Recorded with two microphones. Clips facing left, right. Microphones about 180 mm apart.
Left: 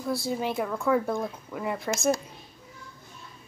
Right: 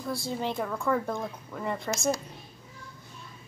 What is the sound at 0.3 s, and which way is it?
Speech, 10° left (ahead or behind).